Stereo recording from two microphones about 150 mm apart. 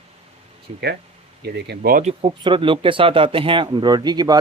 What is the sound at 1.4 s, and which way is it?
Speech, 90° right.